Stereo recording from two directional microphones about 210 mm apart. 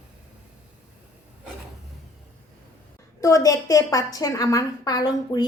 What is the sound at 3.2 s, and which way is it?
A woman's voice, 15° left (ahead or behind).